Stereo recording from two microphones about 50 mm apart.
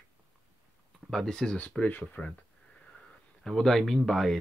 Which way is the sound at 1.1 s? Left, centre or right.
Centre.